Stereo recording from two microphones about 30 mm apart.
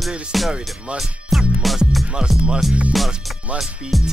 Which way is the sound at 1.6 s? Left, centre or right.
Centre.